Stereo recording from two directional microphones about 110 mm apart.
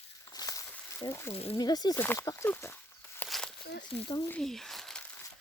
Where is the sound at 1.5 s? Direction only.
35° left (ahead or behind).